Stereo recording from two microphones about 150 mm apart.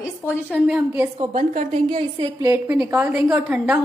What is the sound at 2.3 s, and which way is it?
A woman's voice, 15° right (ahead or behind).